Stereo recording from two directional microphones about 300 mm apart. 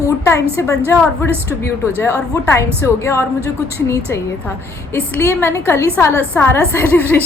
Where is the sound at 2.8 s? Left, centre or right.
Centre.